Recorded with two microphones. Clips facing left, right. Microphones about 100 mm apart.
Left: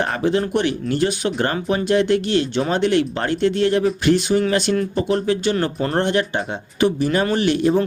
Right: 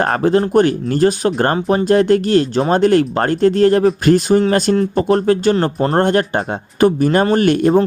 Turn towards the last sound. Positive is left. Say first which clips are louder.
# right 5 dB
turn(degrees=-50)  # may be behind; listen again after turning